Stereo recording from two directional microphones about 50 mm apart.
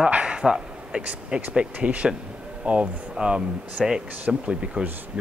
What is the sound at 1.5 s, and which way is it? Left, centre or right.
Speech, right.